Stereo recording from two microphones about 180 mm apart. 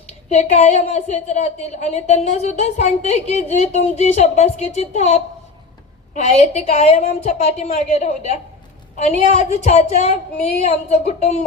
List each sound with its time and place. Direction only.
0.3 s a woman's voice: 40° left (ahead or behind)
6.2 s a woman's voice: 35° left (ahead or behind)